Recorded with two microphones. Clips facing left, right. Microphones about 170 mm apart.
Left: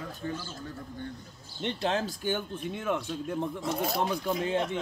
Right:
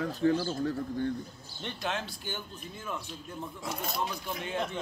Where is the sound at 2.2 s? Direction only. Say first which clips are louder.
Left 9 dB; 60° left (ahead or behind).